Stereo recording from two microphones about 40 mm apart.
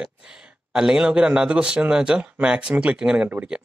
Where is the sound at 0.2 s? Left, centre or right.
Centre.